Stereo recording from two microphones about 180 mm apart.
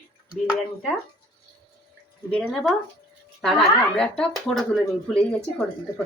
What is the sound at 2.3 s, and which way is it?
Speech, 5° left (ahead or behind).